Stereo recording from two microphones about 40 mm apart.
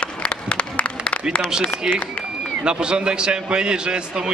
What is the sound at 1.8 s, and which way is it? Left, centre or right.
A man's voice, centre.